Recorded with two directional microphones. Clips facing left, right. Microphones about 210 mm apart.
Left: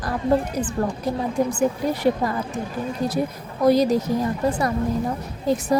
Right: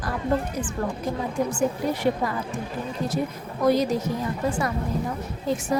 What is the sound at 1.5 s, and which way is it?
Speech, 40° left (ahead or behind).